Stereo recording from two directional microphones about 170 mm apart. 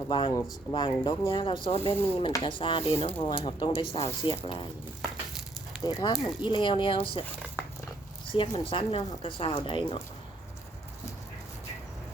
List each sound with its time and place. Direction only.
0.1 s speech: 30° left (ahead or behind)
5.8 s speech: 25° left (ahead or behind)
8.3 s speech: 30° left (ahead or behind)